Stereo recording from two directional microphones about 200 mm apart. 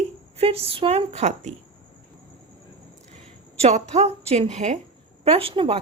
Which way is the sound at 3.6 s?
35° right (ahead or behind).